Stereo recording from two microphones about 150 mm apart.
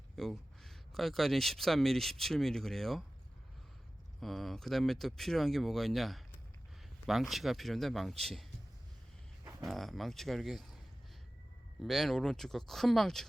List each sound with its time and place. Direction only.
0.2 s speech: centre (ahead or behind)
4.2 s speech: centre (ahead or behind)
9.4 s a sound: 20° right (ahead or behind)
9.6 s speech: centre (ahead or behind)
11.8 s speech: centre (ahead or behind)